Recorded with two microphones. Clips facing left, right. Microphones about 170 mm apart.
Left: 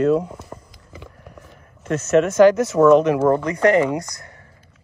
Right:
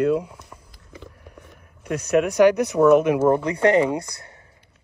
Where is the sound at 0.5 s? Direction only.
60° left (ahead or behind).